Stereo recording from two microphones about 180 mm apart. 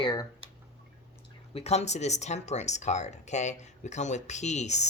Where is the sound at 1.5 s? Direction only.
35° left (ahead or behind).